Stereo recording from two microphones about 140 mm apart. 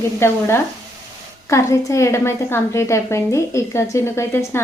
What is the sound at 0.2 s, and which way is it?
A woman's voice, 15° left (ahead or behind).